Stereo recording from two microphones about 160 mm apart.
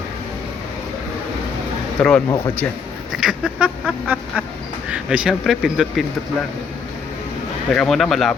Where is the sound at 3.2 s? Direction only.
5° right (ahead or behind).